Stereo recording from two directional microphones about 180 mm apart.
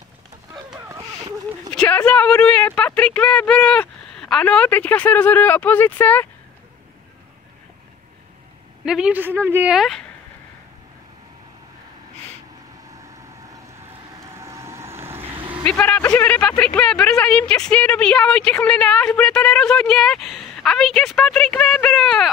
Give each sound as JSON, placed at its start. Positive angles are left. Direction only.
{"t": 0.7, "sound": "a sound", "side_deg": -15}
{"t": 1.7, "sound": "speech", "side_deg": 5}
{"t": 8.8, "sound": "speech", "side_deg": -5}
{"t": 14.4, "sound": "vehicle", "side_deg": -15}
{"t": 15.6, "sound": "speech", "side_deg": 10}